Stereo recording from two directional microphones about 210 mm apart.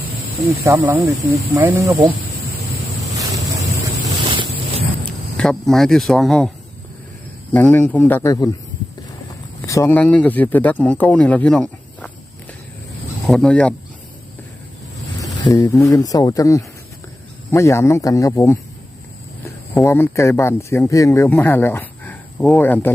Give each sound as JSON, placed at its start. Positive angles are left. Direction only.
{"t": 0.6, "sound": "speech", "side_deg": -15}
{"t": 3.8, "sound": "boat", "side_deg": -25}
{"t": 5.4, "sound": "speech", "side_deg": 5}
{"t": 7.5, "sound": "speech", "side_deg": 5}
{"t": 9.6, "sound": "speech", "side_deg": 15}
{"t": 13.2, "sound": "speech", "side_deg": 5}
{"t": 15.2, "sound": "speech", "side_deg": 15}
{"t": 19.7, "sound": "speech", "side_deg": 10}